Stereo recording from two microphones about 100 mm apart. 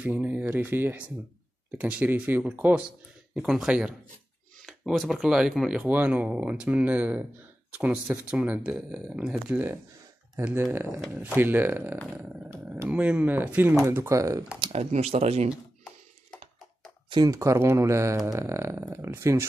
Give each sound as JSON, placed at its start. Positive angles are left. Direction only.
{"t": 0.0, "sound": "speech", "side_deg": -20}
{"t": 3.3, "sound": "speech", "side_deg": -5}
{"t": 5.8, "sound": "speech", "side_deg": -15}
{"t": 13.9, "sound": "speech", "side_deg": -30}
{"t": 14.7, "sound": "speech", "side_deg": -90}
{"t": 17.3, "sound": "speech", "side_deg": -30}